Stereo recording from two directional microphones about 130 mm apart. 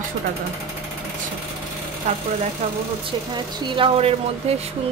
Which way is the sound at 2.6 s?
55° right (ahead or behind).